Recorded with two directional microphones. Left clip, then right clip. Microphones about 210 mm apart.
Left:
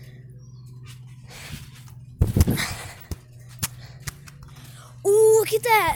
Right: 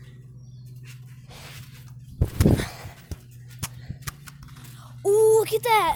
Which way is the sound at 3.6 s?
30° left (ahead or behind).